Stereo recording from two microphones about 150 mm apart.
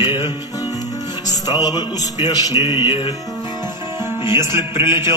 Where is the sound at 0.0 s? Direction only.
30° left (ahead or behind).